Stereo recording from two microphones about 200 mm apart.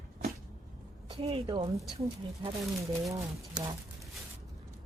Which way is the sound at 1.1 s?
30° right (ahead or behind).